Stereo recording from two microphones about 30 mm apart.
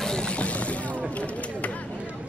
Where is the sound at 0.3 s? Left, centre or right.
Left.